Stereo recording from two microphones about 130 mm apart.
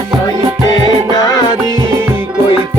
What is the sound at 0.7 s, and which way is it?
Music, 30° left (ahead or behind).